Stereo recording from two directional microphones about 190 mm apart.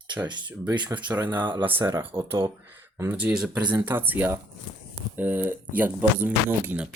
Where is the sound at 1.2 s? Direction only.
10° right (ahead or behind).